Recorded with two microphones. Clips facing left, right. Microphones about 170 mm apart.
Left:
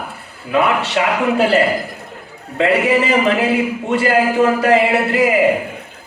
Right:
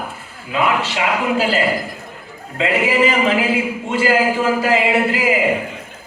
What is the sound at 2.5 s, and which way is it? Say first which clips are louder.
A man's voice: left 3 dB; 60° left (ahead or behind).